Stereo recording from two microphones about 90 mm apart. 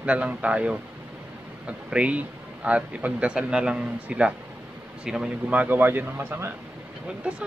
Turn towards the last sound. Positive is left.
turn(degrees=-15)  # may be behind; listen again after turning